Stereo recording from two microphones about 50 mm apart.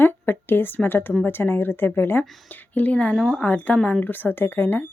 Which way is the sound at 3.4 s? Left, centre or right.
Left.